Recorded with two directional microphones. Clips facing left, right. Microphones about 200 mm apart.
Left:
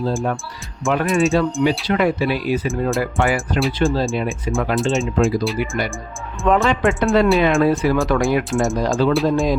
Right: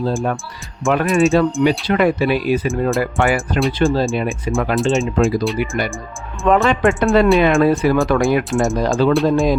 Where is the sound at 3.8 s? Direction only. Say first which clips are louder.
Right 3 dB; 60° right (ahead or behind).